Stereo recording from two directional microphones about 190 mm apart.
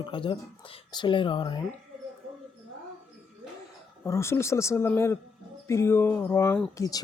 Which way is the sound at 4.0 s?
15° left (ahead or behind).